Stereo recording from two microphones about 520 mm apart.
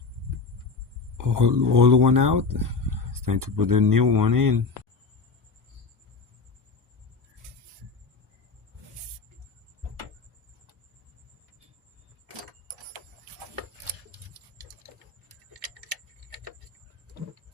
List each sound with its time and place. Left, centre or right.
1.2 s speech: right